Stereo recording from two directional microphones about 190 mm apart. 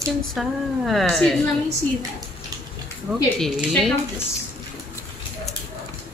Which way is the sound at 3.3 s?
Centre (ahead or behind).